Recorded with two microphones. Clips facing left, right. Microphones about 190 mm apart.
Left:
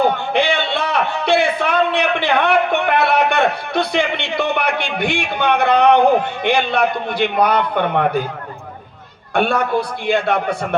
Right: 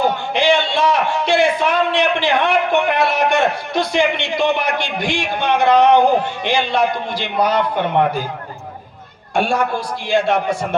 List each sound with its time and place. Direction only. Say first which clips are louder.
0.0 s a man's voice: left 1 dB; 60° left (ahead or behind)
9.3 s a man's voice: left 1 dB; 60° left (ahead or behind)